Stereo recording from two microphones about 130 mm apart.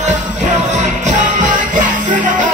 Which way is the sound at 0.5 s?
70° right (ahead or behind).